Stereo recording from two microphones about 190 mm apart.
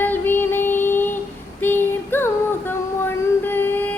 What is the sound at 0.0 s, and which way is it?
Child singing, 10° left (ahead or behind).